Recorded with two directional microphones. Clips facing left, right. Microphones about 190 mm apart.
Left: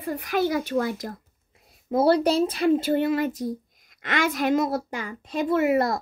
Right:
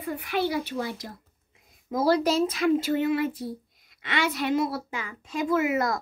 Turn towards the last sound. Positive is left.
turn(degrees=30)  # may be behind; listen again after turning